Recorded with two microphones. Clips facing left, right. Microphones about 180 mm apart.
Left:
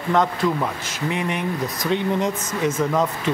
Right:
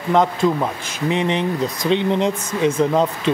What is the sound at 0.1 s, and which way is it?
Speech, 20° right (ahead or behind).